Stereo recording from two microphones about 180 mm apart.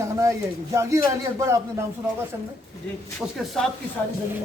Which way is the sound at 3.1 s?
5° left (ahead or behind).